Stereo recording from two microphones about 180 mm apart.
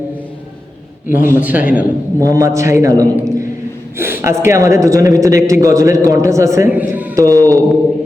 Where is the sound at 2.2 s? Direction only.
20° right (ahead or behind).